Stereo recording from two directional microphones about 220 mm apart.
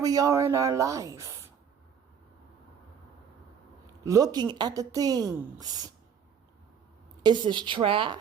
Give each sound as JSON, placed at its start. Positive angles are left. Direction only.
{"t": 0.0, "sound": "speech", "side_deg": -15}
{"t": 4.0, "sound": "speech", "side_deg": -15}
{"t": 7.2, "sound": "a woman's voice", "side_deg": -20}